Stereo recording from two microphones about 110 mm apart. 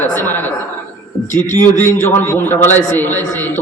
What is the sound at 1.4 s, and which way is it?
A man's voice, 20° left (ahead or behind).